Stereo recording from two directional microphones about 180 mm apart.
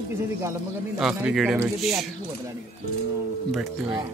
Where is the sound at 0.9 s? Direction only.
Centre (ahead or behind).